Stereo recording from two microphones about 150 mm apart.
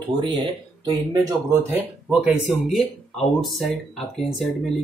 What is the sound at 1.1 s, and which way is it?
Speech, 20° right (ahead or behind).